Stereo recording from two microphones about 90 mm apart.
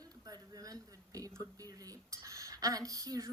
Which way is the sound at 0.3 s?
45° right (ahead or behind).